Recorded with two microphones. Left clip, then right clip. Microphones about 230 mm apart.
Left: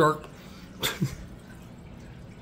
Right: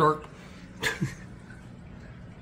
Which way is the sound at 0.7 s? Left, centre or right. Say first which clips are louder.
Right 1 dB; left.